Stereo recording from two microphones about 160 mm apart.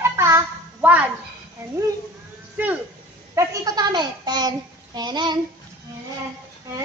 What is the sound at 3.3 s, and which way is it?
A child's voice, 20° right (ahead or behind).